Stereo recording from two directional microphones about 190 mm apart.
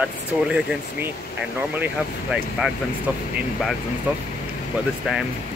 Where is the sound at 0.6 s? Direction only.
5° right (ahead or behind).